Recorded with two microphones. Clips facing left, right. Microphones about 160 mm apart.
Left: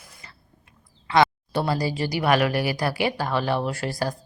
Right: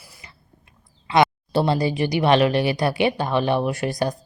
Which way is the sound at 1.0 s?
20° right (ahead or behind).